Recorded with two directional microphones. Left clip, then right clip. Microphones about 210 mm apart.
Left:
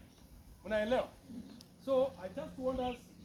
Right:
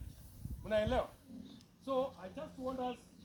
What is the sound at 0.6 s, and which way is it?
A man's voice, 20° right (ahead or behind).